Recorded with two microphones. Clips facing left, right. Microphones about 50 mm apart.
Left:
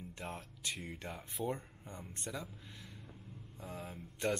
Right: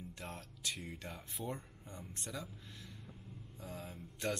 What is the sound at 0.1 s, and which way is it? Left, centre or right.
Speech, centre.